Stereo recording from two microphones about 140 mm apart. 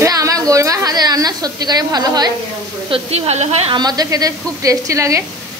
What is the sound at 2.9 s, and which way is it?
Speech, 45° right (ahead or behind).